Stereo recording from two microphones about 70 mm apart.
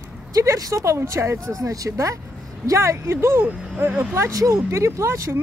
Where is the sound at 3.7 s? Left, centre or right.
Right.